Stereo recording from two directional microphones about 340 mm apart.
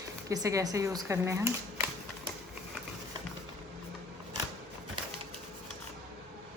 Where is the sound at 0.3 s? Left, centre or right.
Centre.